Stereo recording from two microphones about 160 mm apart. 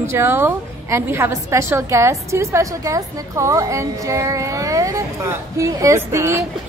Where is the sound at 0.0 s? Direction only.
15° right (ahead or behind).